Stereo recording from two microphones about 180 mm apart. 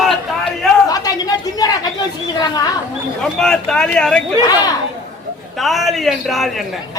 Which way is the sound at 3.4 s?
5° left (ahead or behind).